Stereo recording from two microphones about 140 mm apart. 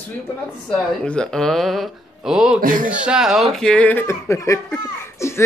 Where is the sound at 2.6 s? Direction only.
80° right.